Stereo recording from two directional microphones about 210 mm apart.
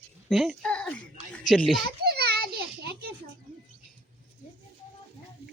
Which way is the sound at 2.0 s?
50° right (ahead or behind).